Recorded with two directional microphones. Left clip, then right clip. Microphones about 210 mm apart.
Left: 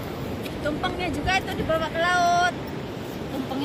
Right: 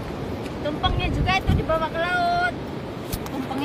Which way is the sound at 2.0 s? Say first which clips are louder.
Left 4 dB; 20° right (ahead or behind).